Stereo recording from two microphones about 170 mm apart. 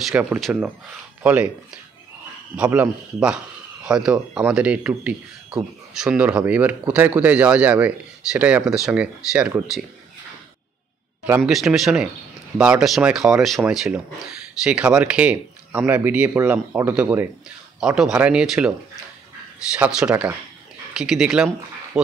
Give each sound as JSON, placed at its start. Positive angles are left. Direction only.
{"t": 0.0, "sound": "speech", "side_deg": -5}
{"t": 2.5, "sound": "speech", "side_deg": -10}
{"t": 11.2, "sound": "speech", "side_deg": -10}
{"t": 11.5, "sound": "speech", "side_deg": 0}
{"t": 19.8, "sound": "speech", "side_deg": -5}